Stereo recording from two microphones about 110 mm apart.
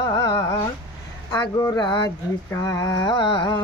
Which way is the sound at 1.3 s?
35° left (ahead or behind).